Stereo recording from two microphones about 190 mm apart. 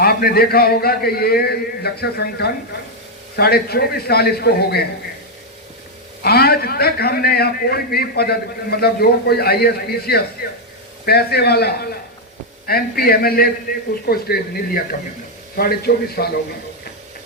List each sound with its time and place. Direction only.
0.0 s a man's voice: 55° left (ahead or behind)
6.2 s a man's voice: 55° left (ahead or behind)